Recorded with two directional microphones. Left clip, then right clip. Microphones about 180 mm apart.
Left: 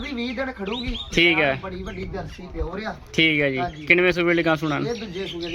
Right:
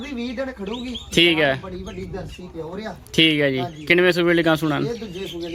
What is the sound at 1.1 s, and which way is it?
Speech, 25° right (ahead or behind).